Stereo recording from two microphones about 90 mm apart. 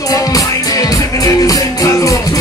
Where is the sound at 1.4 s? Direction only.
40° left (ahead or behind).